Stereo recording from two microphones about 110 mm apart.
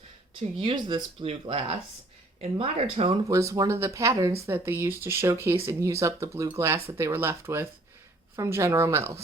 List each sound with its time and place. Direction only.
0.6 s speech: 45° right (ahead or behind)
1.2 s speech: 55° right (ahead or behind)
3.2 s speech: 30° right (ahead or behind)